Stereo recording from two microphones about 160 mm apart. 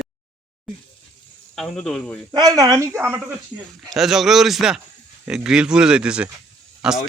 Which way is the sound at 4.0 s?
Centre (ahead or behind).